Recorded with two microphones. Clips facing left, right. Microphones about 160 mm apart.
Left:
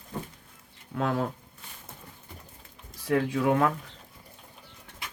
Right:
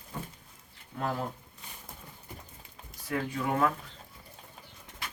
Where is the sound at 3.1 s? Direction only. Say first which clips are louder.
Left 7 dB; 90° left.